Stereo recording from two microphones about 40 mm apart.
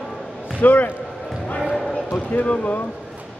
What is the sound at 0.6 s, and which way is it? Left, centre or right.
Speech, left.